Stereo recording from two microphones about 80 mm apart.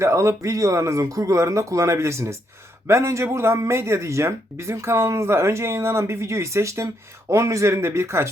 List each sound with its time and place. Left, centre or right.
0.0 s speech: right